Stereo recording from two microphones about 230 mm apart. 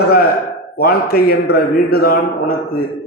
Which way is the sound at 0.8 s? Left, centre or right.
Left.